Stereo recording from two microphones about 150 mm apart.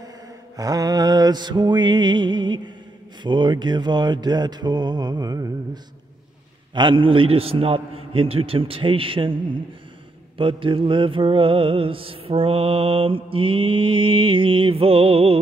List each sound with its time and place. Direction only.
0.6 s mantra: 25° right (ahead or behind)
6.7 s mantra: 30° right (ahead or behind)